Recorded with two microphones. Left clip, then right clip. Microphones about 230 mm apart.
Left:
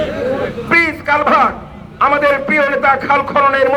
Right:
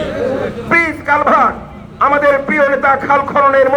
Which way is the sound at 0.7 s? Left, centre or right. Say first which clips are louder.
Even; left.